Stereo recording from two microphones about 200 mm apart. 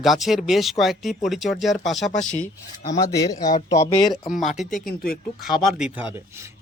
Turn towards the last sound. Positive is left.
turn(degrees=-5)  # may be behind; listen again after turning